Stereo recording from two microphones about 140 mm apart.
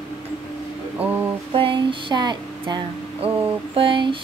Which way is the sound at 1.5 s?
40° right (ahead or behind).